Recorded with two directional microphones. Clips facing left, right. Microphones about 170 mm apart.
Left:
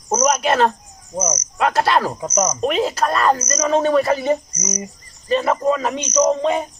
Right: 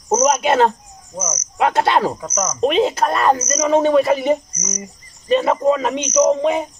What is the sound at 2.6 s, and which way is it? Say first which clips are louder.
Speech: right 7 dB; 20° right (ahead or behind).